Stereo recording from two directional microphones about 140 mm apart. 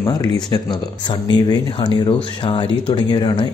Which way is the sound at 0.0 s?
30° left (ahead or behind).